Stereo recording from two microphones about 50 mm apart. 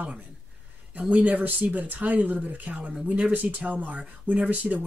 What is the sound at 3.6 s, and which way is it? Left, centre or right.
Speech, right.